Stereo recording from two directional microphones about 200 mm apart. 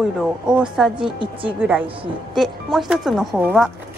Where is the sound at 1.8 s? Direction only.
25° right (ahead or behind).